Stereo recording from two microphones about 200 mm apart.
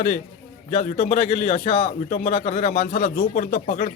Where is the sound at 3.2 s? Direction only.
45° left (ahead or behind).